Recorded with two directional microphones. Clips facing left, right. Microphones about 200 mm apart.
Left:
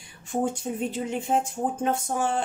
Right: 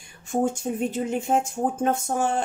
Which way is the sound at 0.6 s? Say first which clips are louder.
Right 3 dB; 45° right (ahead or behind).